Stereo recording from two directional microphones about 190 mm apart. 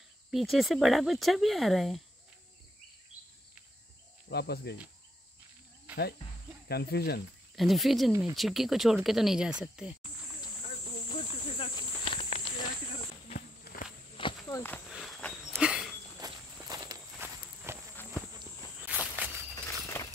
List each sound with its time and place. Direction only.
0.3 s speech: centre (ahead or behind)
4.3 s speech: 60° left (ahead or behind)
5.9 s cricket: 5° right (ahead or behind)
6.7 s speech: 55° left (ahead or behind)
7.5 s speech: centre (ahead or behind)
11.1 s snake: 30° left (ahead or behind)
14.1 s walk: 25° left (ahead or behind)
14.9 s walk: centre (ahead or behind)
15.5 s a sound: 5° right (ahead or behind)
16.2 s walk: 20° right (ahead or behind)
19.1 s walk: 10° right (ahead or behind)
19.5 s a sound: 15° left (ahead or behind)